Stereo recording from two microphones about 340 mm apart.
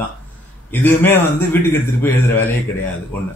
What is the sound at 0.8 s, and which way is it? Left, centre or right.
Speech, centre.